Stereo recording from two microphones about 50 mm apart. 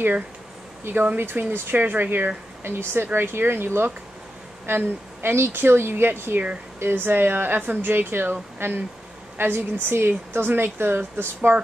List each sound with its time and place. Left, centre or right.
1.1 s speech: right